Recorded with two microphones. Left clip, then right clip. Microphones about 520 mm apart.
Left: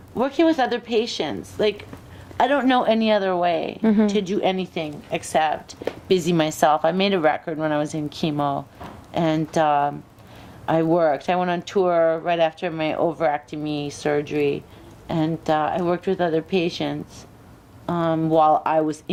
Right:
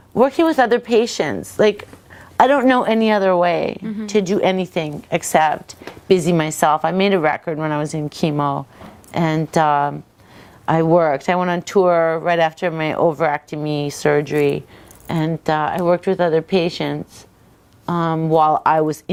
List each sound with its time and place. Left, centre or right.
0.2 s a woman's voice: right
2.4 s a woman's voice: right
6.1 s speech: right